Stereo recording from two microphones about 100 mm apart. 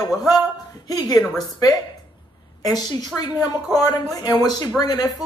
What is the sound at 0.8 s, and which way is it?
Speech, 40° left (ahead or behind).